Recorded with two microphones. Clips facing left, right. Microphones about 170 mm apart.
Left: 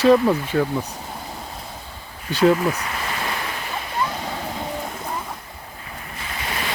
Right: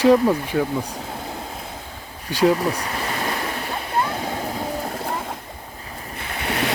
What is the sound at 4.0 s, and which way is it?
Splash, 60° right (ahead or behind).